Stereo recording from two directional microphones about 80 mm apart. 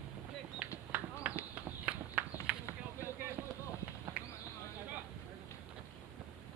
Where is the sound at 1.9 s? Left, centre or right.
Centre.